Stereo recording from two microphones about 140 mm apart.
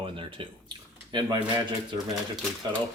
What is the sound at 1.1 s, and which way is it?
Speech, 35° right (ahead or behind).